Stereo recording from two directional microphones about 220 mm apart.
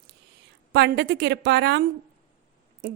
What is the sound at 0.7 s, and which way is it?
A woman's voice, 50° right (ahead or behind).